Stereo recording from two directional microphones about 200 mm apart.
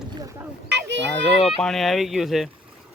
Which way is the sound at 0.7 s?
60° right (ahead or behind).